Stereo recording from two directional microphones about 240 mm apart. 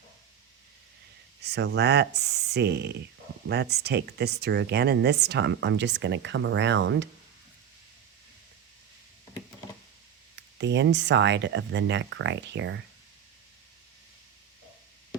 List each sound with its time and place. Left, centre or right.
1.5 s speech: right
10.6 s speech: right